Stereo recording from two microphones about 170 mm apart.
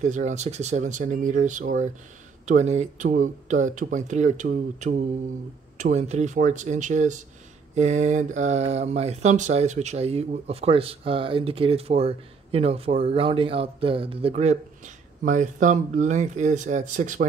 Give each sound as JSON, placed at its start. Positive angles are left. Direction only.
{"t": 0.0, "sound": "speech", "side_deg": -45}